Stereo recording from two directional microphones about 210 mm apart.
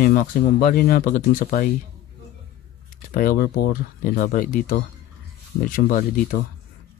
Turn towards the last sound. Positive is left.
turn(degrees=40)  # may be behind; listen again after turning